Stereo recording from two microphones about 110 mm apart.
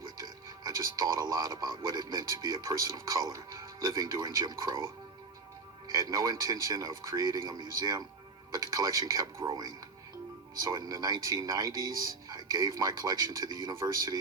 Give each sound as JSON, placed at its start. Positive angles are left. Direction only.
{"t": 0.0, "sound": "speech", "side_deg": -35}
{"t": 5.9, "sound": "speech", "side_deg": -35}